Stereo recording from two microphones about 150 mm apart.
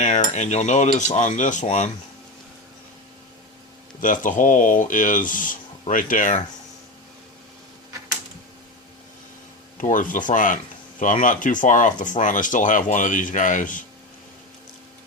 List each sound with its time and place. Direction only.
0.0 s cutlery: 50° left (ahead or behind)
4.0 s speech: 60° left (ahead or behind)
9.7 s speech: 60° left (ahead or behind)